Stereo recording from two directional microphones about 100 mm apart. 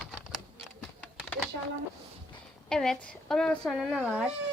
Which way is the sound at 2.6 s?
5° left (ahead or behind).